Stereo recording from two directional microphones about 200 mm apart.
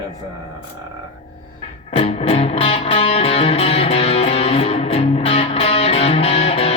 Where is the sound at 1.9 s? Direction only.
30° left (ahead or behind).